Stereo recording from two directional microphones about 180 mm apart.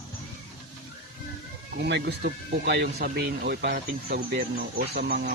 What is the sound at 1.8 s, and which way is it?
Speech, 65° right (ahead or behind).